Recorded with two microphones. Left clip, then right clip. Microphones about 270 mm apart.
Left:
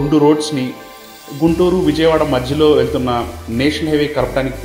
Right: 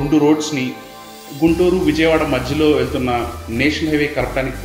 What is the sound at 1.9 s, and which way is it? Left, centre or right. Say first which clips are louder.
A man's voice: left 2 dB; centre.